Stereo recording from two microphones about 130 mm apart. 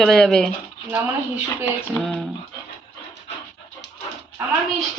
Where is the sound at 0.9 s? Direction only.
15° right (ahead or behind).